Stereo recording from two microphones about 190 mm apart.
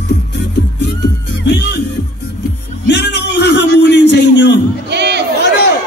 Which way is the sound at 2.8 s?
65° left (ahead or behind).